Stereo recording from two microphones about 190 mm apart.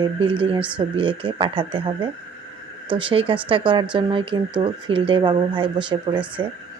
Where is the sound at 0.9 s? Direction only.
30° right (ahead or behind).